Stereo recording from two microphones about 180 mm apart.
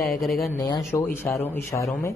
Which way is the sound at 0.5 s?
20° left (ahead or behind).